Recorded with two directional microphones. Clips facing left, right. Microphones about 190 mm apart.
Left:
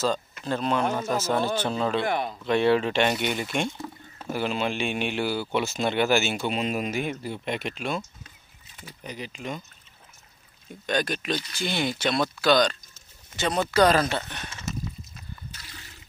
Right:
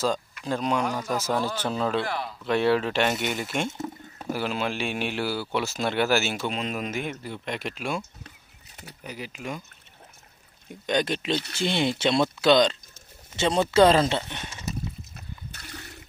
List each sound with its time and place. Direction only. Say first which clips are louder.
0.5 s speech: even; 10° right (ahead or behind)
0.8 s speech: left 2 dB; 25° left (ahead or behind)
1.1 s speech: left 1 dB; 15° right (ahead or behind)
2.0 s speech: left 2 dB; 20° left (ahead or behind)
2.4 s speech: left 1 dB; 5° right (ahead or behind)
3.7 s a sound: right 4 dB; 20° right (ahead or behind)
4.3 s speech: left 1 dB; 5° right (ahead or behind)
9.0 s speech: even; 10° right (ahead or behind)
10.9 s speech: right 2 dB; 20° right (ahead or behind)
15.1 s water: right 1 dB; 60° right (ahead or behind)